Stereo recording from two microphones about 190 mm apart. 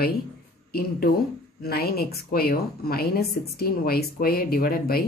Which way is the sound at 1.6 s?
55° left (ahead or behind).